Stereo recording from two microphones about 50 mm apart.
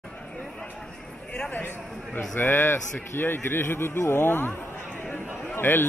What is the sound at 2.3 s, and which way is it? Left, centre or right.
A man's voice, left.